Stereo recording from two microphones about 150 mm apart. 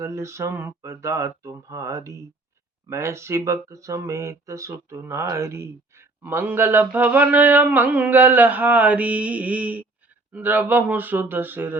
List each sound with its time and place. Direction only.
0.0 s speech: 20° right (ahead or behind)